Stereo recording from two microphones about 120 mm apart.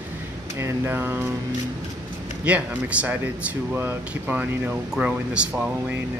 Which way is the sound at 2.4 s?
10° right (ahead or behind).